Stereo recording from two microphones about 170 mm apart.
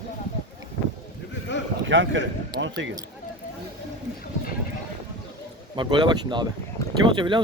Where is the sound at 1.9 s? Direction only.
90° right.